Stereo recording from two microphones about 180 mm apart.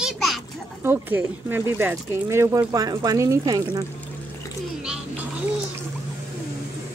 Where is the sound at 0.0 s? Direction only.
Centre (ahead or behind).